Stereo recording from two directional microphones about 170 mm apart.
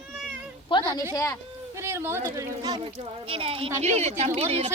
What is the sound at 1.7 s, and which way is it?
Speech, 15° right (ahead or behind).